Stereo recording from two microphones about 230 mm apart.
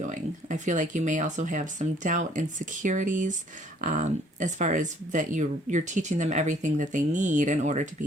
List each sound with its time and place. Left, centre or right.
0.0 s speech: right